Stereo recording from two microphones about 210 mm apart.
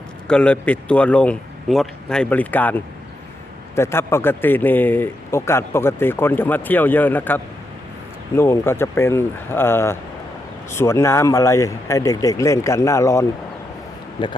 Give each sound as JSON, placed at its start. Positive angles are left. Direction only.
{"t": 0.3, "sound": "speech", "side_deg": 5}